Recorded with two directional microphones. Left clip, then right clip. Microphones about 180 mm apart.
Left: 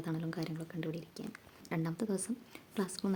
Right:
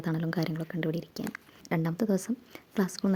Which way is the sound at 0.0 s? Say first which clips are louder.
Right 7 dB; 40° right (ahead or behind).